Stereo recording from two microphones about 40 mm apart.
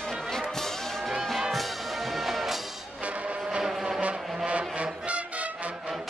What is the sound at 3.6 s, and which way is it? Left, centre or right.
Vehicle, centre.